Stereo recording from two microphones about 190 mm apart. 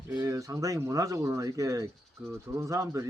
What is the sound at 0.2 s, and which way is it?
Speech, 15° right (ahead or behind).